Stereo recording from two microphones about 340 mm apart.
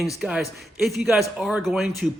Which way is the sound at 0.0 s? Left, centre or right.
Centre.